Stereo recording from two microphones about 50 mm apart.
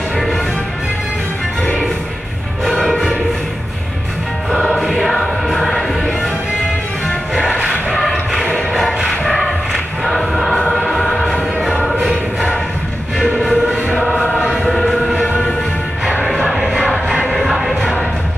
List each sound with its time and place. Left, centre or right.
2.9 s music: centre
4.5 s music: centre
8.0 s music: centre
13.3 s music: centre
14.6 s choir: centre
16.3 s a sound: centre
17.3 s music: centre